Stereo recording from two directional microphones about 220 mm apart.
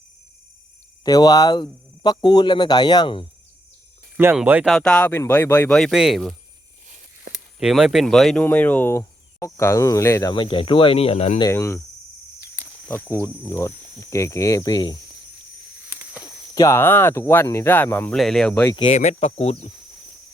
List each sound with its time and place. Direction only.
1.0 s speech: 15° left (ahead or behind)
4.2 s speech: 10° right (ahead or behind)
7.6 s speech: centre (ahead or behind); by 11.4 s 25° left (ahead or behind)
11.4 s speech: 10° left (ahead or behind)
12.9 s speech: 10° left (ahead or behind)
16.2 s speech: 15° left (ahead or behind)
18.7 s speech: 25° left (ahead or behind)